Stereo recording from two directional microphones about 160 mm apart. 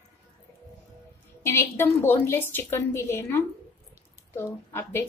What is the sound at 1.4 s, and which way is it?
A woman's voice, 15° left (ahead or behind).